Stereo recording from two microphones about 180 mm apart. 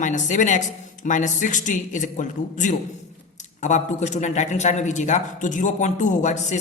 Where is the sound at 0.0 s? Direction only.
45° left (ahead or behind).